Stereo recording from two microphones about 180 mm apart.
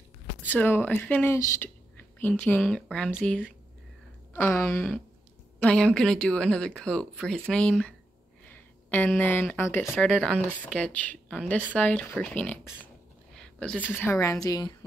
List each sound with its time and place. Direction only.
0.5 s a woman's voice: 10° left (ahead or behind)
10.1 s speech: 5° right (ahead or behind)
10.6 s a woman's voice: 5° left (ahead or behind)
13.4 s a sound: 5° left (ahead or behind)
13.8 s a woman's voice: 10° left (ahead or behind)